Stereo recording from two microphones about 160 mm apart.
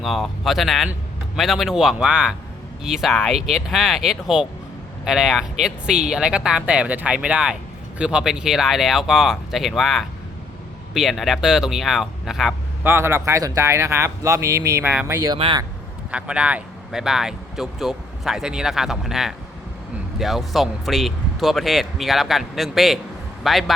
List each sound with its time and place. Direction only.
0.0 s speech: centre (ahead or behind)
12.8 s speech: 15° right (ahead or behind)
15.3 s a man's voice: 30° right (ahead or behind)
16.1 s a man's voice: 5° right (ahead or behind)